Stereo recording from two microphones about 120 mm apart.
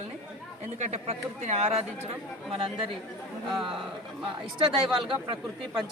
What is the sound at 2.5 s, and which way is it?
Speech, 50° right (ahead or behind).